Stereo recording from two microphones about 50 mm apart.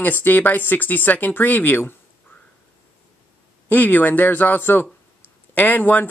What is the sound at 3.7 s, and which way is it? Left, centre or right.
Speech, left.